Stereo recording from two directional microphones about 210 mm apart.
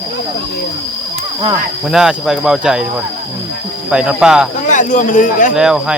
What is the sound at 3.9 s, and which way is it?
Speech, 5° right (ahead or behind).